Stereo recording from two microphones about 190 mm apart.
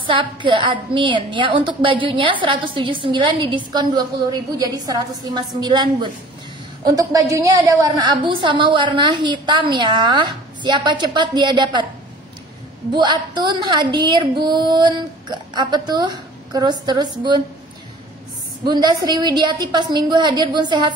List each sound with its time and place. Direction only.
0.0 s a woman's voice: 25° right (ahead or behind)
12.9 s a woman's voice: 25° right (ahead or behind)
18.6 s a woman's voice: 20° right (ahead or behind)